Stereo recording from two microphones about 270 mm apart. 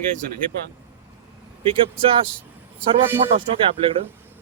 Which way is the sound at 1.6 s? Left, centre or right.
Centre.